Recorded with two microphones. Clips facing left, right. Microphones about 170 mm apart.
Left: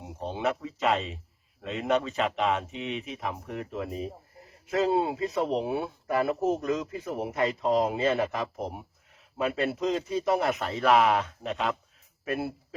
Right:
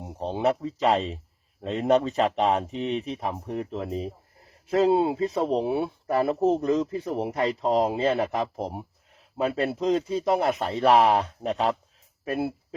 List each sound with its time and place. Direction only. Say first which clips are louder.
0.0 s speech: right 5 dB; 35° right (ahead or behind)